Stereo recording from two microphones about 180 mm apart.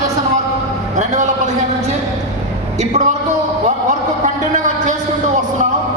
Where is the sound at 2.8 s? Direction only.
40° right (ahead or behind).